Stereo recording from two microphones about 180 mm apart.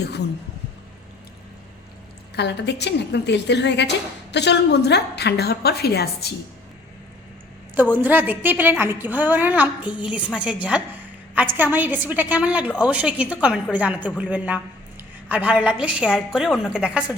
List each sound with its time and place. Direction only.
2.3 s a woman's voice: 70° left (ahead or behind)
7.8 s a woman's voice: 10° right (ahead or behind)